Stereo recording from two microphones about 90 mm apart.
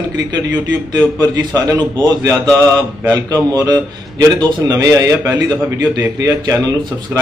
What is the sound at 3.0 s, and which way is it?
A man's voice, 40° right (ahead or behind).